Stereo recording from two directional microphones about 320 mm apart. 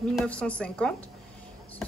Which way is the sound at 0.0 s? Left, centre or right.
Centre.